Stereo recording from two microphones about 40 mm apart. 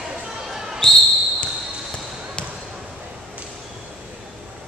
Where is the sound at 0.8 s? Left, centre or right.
Left.